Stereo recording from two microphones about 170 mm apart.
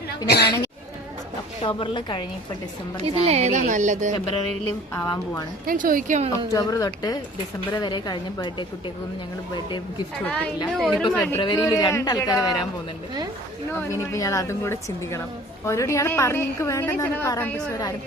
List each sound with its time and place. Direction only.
0.3 s speech: 70° left (ahead or behind)
1.6 s a man's voice: 30° left (ahead or behind)
3.2 s speech: 40° right (ahead or behind)
4.9 s a woman's voice: 15° left (ahead or behind)
5.6 s speech: 50° right (ahead or behind)
6.5 s a man's voice: 20° left (ahead or behind)
10.2 s a woman's voice: 10° left (ahead or behind)
11.1 s a woman's voice: 10° left (ahead or behind)
11.3 s a man's voice: 30° left (ahead or behind)
13.7 s a woman's voice: 20° left (ahead or behind)